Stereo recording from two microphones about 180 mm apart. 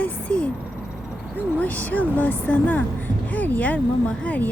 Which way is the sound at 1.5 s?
10° left (ahead or behind).